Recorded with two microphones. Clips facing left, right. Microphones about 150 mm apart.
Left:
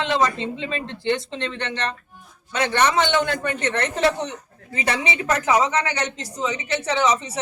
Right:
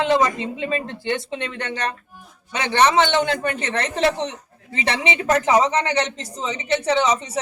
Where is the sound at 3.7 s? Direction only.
30° right (ahead or behind).